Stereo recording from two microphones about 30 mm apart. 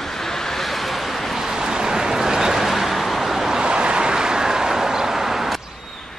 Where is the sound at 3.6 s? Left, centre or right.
Right; by 5.6 s centre.